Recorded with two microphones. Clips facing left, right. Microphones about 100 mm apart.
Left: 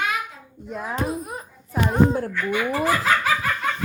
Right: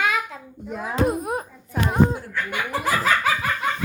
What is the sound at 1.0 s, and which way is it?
Speech, 55° right (ahead or behind).